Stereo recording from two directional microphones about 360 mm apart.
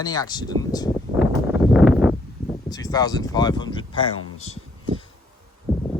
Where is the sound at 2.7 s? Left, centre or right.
Centre.